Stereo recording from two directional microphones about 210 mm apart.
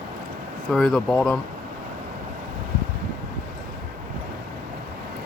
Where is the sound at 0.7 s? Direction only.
Centre (ahead or behind).